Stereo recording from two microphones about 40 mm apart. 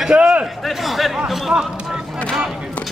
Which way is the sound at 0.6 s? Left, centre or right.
Centre.